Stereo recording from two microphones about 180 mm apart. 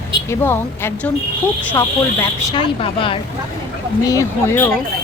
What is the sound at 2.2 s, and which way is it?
Speech, 20° left (ahead or behind).